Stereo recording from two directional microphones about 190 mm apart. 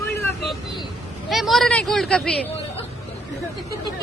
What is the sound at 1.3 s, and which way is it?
Speech, centre (ahead or behind).